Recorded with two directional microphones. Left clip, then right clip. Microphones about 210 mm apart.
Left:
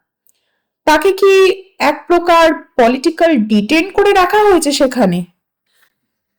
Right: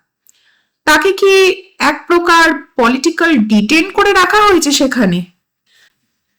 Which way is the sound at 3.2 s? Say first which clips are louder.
Even; 5° left (ahead or behind).